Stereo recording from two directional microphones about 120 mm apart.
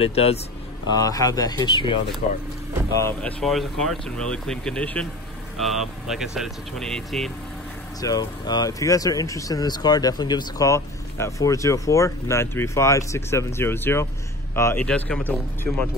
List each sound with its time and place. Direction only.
0.0 s a man's voice: 60° left (ahead or behind)
0.8 s speech: 30° left (ahead or behind)
2.9 s speech: 25° left (ahead or behind)
3.2 s speech: 10° left (ahead or behind)
5.6 s speech: 5° right (ahead or behind)
8.0 s a man's voice: 30° left (ahead or behind)
14.9 s speech: 5° left (ahead or behind)